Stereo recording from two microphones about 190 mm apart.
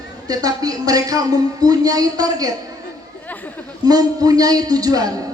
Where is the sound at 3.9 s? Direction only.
20° right (ahead or behind).